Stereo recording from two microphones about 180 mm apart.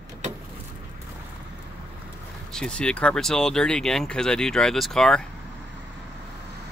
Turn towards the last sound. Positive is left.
turn(degrees=5)  # may be behind; listen again after turning